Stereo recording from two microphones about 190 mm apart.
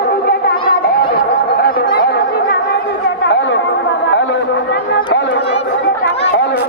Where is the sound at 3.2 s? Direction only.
70° left (ahead or behind).